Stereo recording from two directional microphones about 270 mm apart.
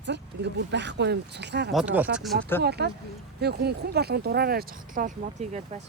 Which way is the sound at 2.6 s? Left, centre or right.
Right.